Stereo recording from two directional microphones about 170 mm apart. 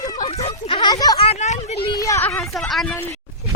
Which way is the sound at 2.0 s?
20° left (ahead or behind).